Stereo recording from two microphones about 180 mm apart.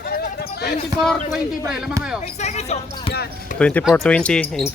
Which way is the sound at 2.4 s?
35° left (ahead or behind).